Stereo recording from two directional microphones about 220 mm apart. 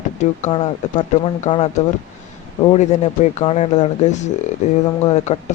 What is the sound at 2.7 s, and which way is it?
Speech, 30° left (ahead or behind).